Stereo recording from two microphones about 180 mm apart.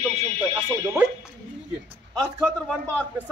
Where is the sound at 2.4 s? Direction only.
5° left (ahead or behind).